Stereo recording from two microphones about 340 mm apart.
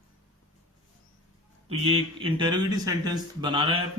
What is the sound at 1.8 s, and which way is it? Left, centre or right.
Speech, centre.